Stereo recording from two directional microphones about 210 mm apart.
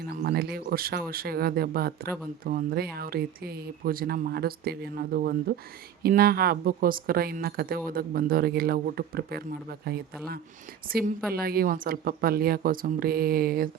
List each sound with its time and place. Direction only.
0.2 s speech: 45° right (ahead or behind)